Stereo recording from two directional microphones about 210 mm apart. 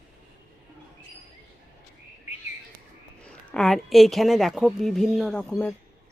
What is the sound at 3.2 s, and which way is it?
A woman's voice, 5° left (ahead or behind).